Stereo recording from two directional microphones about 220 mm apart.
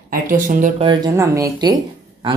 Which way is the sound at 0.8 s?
15° right (ahead or behind).